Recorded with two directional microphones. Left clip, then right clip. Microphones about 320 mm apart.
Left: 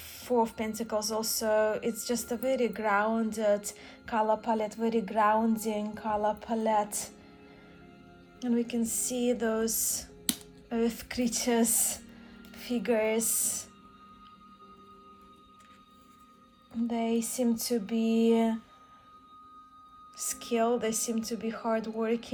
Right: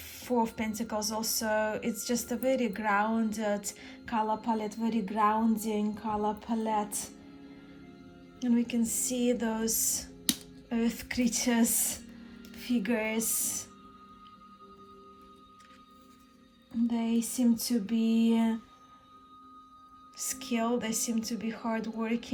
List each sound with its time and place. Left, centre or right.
0.0 s speech: centre
8.4 s speech: centre
16.7 s speech: centre
20.1 s speech: centre